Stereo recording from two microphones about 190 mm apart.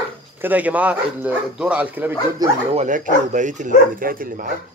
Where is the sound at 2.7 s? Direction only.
40° right (ahead or behind).